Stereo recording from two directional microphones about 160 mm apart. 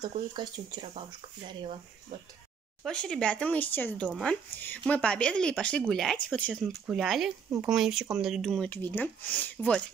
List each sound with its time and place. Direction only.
0.3 s speech: 25° right (ahead or behind)
2.8 s speech: 5° left (ahead or behind)
8.6 s speech: 10° left (ahead or behind)